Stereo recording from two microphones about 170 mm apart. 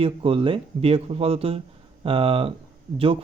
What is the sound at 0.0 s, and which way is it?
Speech, 35° right (ahead or behind).